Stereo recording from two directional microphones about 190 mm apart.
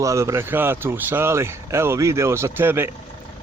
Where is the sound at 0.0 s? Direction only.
15° right (ahead or behind).